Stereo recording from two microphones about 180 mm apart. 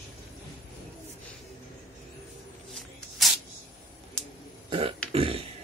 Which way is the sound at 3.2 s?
Centre (ahead or behind).